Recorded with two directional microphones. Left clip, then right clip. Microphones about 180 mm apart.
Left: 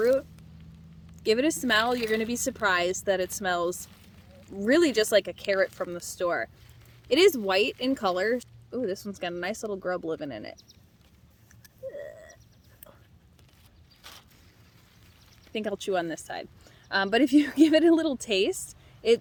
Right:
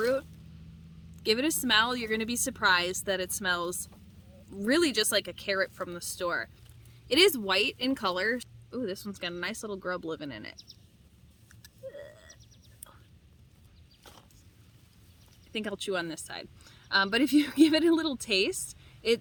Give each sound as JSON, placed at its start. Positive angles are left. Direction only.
{"t": 0.0, "sound": "a woman's voice", "side_deg": -20}
{"t": 11.6, "sound": "a sound", "side_deg": -15}
{"t": 15.5, "sound": "speech", "side_deg": -15}